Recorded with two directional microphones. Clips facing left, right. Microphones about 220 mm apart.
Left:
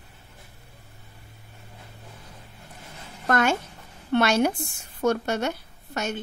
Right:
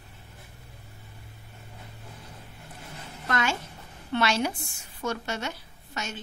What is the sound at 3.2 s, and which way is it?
A woman's voice, 55° left (ahead or behind).